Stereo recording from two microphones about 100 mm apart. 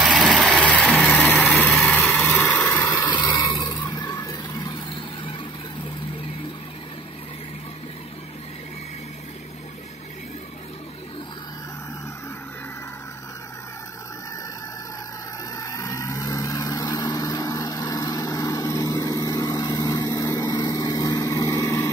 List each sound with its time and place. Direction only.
0.1 s vehicle: centre (ahead or behind)
1.7 s lawn mower: centre (ahead or behind)
2.2 s vehicle: 20° left (ahead or behind)
3.1 s a sound: 45° left (ahead or behind)
15.5 s vehicle: 35° left (ahead or behind)
21.6 s vehicle: 20° left (ahead or behind)